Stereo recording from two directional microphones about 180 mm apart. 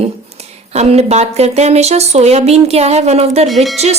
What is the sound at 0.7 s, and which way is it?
Speech, 35° right (ahead or behind).